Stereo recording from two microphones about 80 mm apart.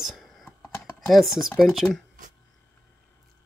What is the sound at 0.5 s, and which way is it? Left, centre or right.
Typing, left.